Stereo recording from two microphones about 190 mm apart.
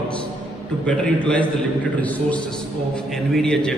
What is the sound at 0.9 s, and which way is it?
A man's voice, 5° left (ahead or behind).